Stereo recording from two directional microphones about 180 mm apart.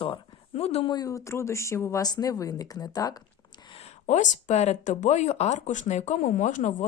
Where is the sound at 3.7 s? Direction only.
40° left (ahead or behind).